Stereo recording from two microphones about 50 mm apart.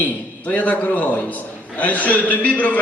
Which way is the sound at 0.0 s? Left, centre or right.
Left.